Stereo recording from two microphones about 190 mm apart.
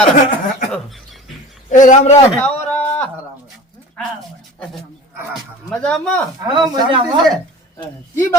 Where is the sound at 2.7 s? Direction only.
10° left (ahead or behind).